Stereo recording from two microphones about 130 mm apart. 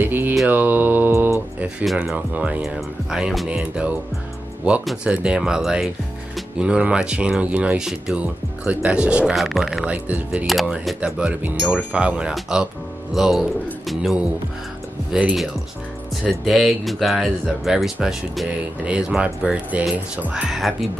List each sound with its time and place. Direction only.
0.0 s mantra: 15° right (ahead or behind)
1.9 s speech: 5° right (ahead or behind)
10.0 s speech: 10° right (ahead or behind)
10.4 s speech: centre (ahead or behind)